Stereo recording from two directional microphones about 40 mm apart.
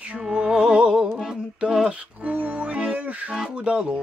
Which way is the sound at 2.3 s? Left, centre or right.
Right.